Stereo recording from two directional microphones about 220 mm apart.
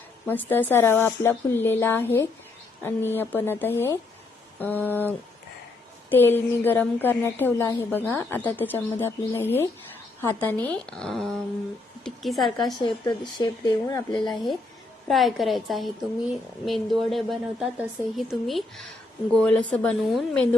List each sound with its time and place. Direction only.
0.3 s a woman's voice: 10° left (ahead or behind)
12.8 s speech: 20° left (ahead or behind)
15.0 s a woman's voice: centre (ahead or behind)